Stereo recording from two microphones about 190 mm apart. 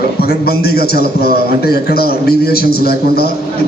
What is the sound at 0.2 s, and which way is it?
A man's voice, 55° left (ahead or behind).